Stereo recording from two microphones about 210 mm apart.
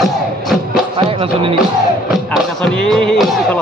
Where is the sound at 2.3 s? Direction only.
Centre (ahead or behind).